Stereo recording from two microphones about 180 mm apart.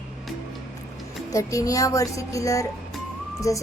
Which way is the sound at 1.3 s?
20° left (ahead or behind).